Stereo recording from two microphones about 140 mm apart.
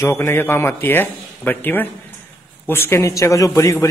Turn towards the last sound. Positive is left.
turn(degrees=20)  # may be behind; listen again after turning